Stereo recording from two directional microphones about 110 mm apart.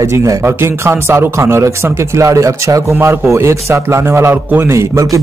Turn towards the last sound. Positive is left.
turn(degrees=-30)  # may be behind; listen again after turning